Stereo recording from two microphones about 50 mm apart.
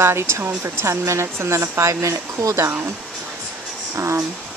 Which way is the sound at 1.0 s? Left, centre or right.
Right.